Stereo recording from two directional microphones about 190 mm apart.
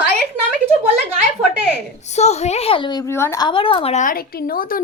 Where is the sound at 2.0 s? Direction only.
35° left (ahead or behind); by 3.5 s 15° left (ahead or behind).